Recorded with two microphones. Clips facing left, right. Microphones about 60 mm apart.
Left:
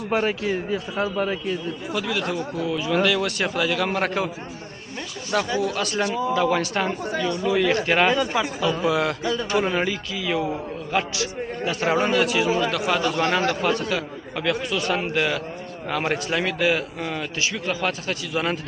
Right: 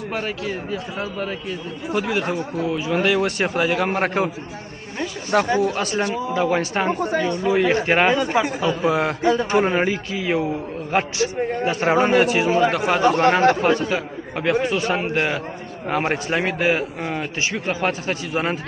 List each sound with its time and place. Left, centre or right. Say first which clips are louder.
0.1 s a man's voice: left 5 dB; centre
1.9 s speech: right 4 dB; right
5.3 s speech: right 5 dB; right
5.7 s speech: right 2 dB; right